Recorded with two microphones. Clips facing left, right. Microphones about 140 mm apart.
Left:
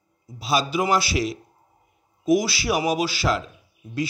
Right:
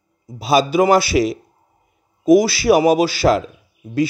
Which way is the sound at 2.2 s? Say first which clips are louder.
Right 8 dB; 55° right (ahead or behind).